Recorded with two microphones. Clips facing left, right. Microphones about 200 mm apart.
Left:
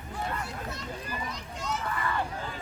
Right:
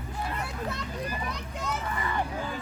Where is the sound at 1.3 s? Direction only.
60° right (ahead or behind).